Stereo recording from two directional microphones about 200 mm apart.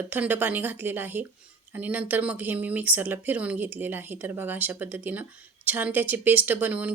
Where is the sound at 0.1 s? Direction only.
10° right (ahead or behind).